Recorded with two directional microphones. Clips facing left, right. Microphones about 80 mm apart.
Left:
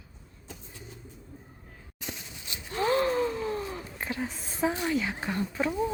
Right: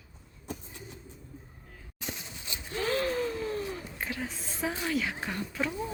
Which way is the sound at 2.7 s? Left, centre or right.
Left.